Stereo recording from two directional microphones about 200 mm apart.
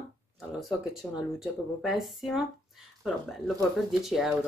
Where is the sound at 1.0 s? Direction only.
5° left (ahead or behind).